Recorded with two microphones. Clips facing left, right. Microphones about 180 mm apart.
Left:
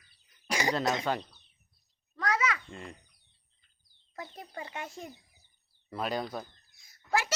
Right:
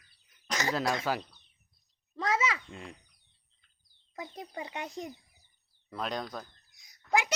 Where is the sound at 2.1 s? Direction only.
25° right (ahead or behind).